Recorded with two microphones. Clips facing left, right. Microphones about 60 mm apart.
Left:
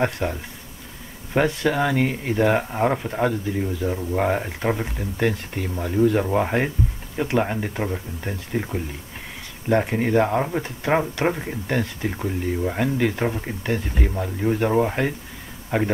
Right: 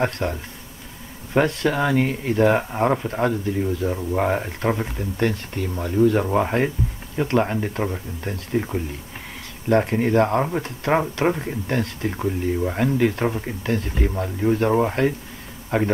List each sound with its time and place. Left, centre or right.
0.0 s speech: centre
5.8 s speech: centre
6.4 s speech: centre